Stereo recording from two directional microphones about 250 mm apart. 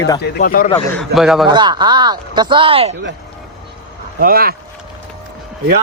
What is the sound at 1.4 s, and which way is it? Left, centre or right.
Speech, centre.